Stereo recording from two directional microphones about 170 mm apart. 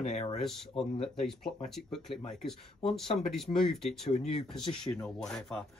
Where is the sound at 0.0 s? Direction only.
40° left (ahead or behind).